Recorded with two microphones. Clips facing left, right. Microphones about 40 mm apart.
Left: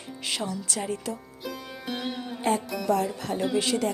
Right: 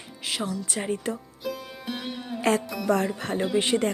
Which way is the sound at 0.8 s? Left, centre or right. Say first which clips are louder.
Right 3 dB; right.